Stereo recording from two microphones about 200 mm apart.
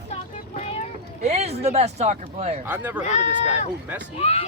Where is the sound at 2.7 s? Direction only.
10° right (ahead or behind).